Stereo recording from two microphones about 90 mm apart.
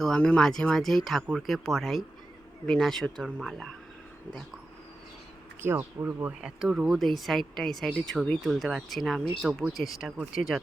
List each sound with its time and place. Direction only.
0.0 s speech: 10° left (ahead or behind)
5.6 s speech: 25° right (ahead or behind)
6.4 s speech: 10° right (ahead or behind)